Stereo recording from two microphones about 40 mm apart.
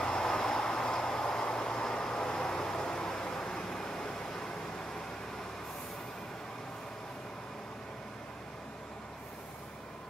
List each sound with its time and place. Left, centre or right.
0.0 s vehicle: centre